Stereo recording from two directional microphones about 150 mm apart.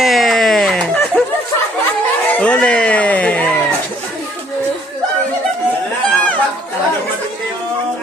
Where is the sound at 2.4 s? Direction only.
10° left (ahead or behind).